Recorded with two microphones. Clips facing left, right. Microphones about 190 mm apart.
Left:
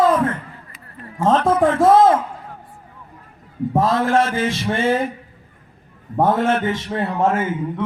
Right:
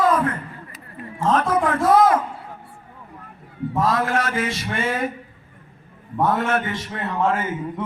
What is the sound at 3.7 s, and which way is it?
Mantra, 25° left (ahead or behind).